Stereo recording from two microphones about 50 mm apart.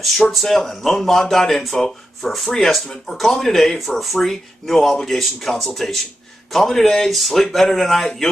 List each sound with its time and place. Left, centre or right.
0.0 s speech: centre